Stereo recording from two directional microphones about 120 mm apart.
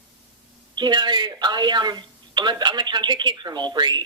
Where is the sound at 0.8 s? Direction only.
40° right (ahead or behind).